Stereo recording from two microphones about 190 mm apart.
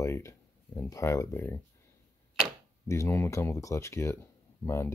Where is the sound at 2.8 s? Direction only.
15° left (ahead or behind).